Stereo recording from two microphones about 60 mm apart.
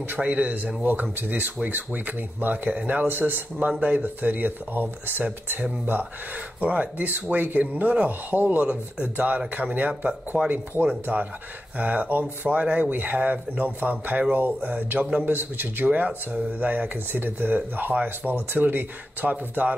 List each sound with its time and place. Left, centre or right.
0.2 s speech: right